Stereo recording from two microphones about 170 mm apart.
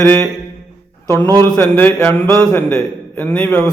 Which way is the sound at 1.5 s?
10° left (ahead or behind).